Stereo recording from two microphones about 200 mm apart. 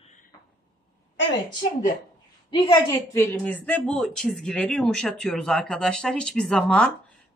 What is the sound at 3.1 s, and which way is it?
Speech, 10° left (ahead or behind).